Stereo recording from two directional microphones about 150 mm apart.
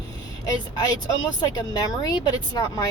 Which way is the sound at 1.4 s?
25° left (ahead or behind).